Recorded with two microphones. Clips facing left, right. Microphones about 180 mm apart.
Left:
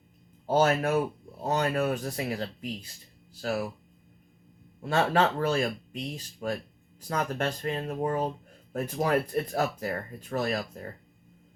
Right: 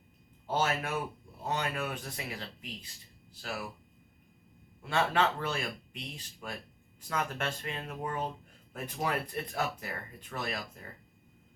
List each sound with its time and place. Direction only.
0.4 s speech: 45° left (ahead or behind)
4.8 s speech: 40° left (ahead or behind)